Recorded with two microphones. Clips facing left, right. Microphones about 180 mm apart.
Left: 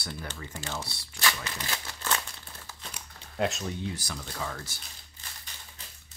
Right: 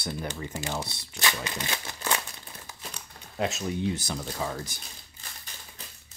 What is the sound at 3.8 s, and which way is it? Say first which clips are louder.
Speech: right 6 dB; 25° right (ahead or behind).